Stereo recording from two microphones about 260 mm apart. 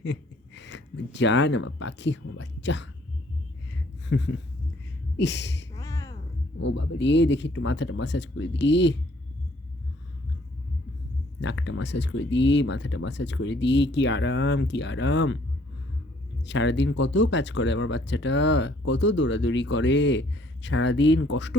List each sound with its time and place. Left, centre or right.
0.0 s speech: left
4.1 s speech: left
5.7 s a sound: centre
6.7 s speech: left
11.3 s speech: left
16.5 s speech: left